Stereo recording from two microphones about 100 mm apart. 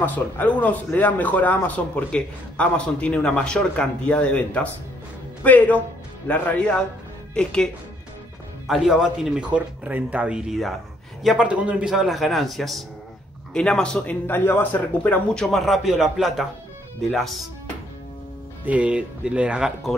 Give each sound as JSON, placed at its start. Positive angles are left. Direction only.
{"t": 0.0, "sound": "speech", "side_deg": 15}
{"t": 8.6, "sound": "speech", "side_deg": 0}
{"t": 11.9, "sound": "speech", "side_deg": 0}
{"t": 14.2, "sound": "speech", "side_deg": 20}
{"t": 15.3, "sound": "speech", "side_deg": 0}
{"t": 18.7, "sound": "speech", "side_deg": -15}